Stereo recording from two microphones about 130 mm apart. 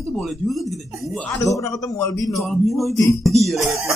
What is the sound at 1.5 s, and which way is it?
Speech, 25° left (ahead or behind).